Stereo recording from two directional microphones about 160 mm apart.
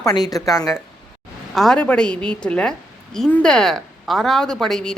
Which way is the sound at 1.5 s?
Centre (ahead or behind).